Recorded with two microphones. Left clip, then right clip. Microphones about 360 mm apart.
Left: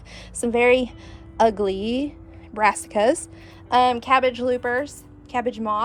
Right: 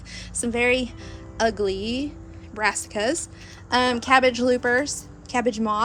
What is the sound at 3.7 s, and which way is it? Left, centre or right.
A woman's voice, centre.